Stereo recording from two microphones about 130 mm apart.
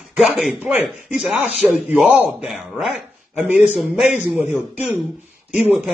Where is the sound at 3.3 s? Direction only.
10° right (ahead or behind).